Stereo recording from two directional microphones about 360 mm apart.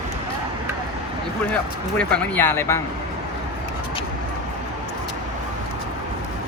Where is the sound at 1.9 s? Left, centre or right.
Centre.